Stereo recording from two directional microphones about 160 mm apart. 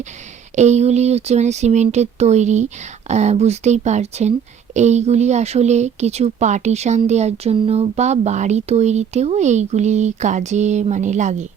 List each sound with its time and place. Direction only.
0.5 s speech: 45° right (ahead or behind)